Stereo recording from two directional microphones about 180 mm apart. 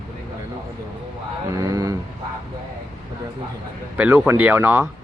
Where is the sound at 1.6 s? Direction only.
20° right (ahead or behind).